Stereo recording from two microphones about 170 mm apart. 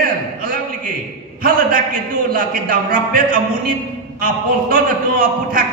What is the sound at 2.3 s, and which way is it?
A man's voice, 55° right (ahead or behind).